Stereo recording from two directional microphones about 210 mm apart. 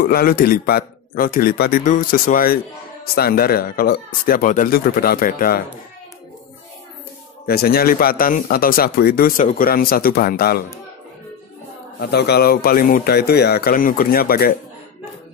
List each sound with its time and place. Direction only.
0.0 s speech: 45° left (ahead or behind)
7.4 s speech: 45° left (ahead or behind)
12.0 s speech: 50° left (ahead or behind)